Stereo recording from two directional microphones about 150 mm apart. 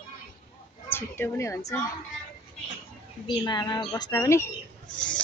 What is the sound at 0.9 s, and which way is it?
Speech, 15° left (ahead or behind).